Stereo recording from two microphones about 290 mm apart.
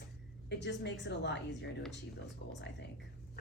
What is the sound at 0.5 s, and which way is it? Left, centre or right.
A woman's voice, left.